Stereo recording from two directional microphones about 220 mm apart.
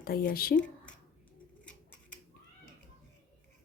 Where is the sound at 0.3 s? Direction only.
40° left (ahead or behind).